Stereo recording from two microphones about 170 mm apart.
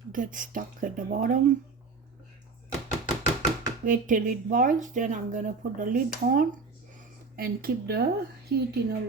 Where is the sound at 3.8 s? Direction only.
50° right (ahead or behind).